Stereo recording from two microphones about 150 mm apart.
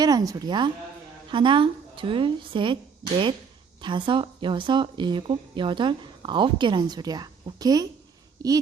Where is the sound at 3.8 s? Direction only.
30° right (ahead or behind).